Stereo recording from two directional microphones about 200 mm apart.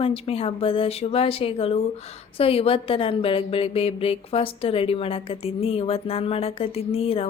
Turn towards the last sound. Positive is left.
turn(degrees=30)  # may be behind; listen again after turning